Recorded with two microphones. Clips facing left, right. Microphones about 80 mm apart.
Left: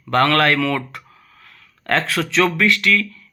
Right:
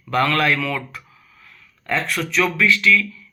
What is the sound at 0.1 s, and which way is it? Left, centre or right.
Speech, left.